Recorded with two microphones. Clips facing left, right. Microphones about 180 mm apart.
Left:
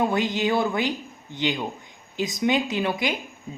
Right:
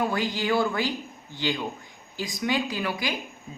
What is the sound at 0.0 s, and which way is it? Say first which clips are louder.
Speech: left 4 dB; 20° left (ahead or behind).